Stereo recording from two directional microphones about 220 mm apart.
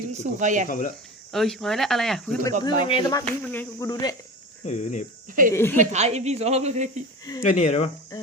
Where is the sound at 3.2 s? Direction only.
5° left (ahead or behind).